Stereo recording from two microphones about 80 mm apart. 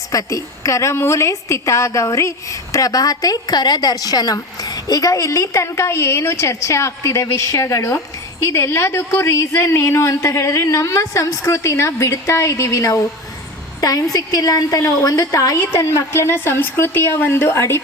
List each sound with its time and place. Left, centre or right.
0.1 s a woman's voice: left